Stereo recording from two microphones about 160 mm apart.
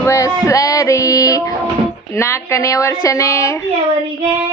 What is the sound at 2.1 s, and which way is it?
A woman's voice, 15° left (ahead or behind).